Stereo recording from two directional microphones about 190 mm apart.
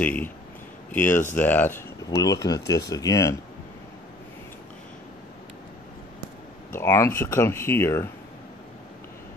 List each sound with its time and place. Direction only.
0.0 s speech: 5° left (ahead or behind)
6.8 s speech: 15° left (ahead or behind)